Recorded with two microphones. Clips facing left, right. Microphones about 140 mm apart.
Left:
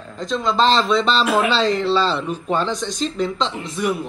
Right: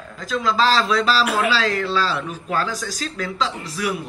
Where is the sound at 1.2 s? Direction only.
25° left (ahead or behind).